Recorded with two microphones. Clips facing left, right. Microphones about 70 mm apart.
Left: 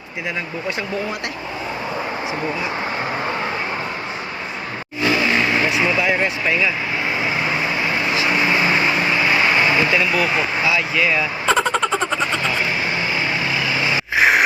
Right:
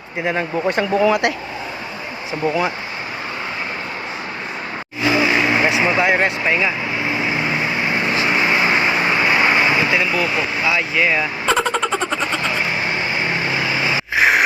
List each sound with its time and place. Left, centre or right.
0.3 s speech: right
1.0 s speech: right
5.0 s vehicle: centre
5.5 s speech: right
8.7 s vehicle: right
10.7 s speech: centre
11.4 s vehicle: centre
13.6 s vehicle: right
14.2 s a sound: centre